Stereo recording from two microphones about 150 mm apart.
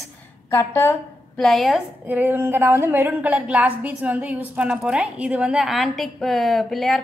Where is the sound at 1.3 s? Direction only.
Centre (ahead or behind).